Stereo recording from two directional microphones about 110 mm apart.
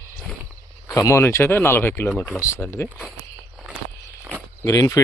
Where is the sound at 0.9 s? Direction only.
25° left (ahead or behind).